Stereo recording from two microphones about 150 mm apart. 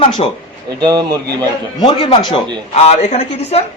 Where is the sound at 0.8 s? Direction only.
25° right (ahead or behind).